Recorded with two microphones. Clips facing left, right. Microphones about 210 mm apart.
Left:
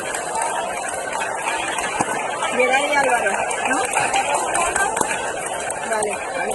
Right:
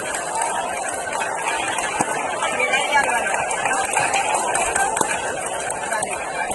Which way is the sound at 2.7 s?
45° left (ahead or behind).